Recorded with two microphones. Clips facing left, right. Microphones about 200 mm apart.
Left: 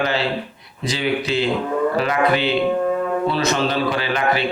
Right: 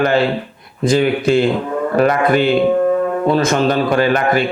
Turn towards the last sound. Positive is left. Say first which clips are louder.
# right 6 dB
turn(degrees=-50)  # may be behind; listen again after turning